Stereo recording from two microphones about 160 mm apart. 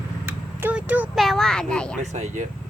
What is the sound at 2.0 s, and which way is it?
Speech, 45° right (ahead or behind).